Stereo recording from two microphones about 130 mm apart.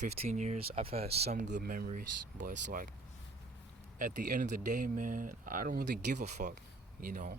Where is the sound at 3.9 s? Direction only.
90° right.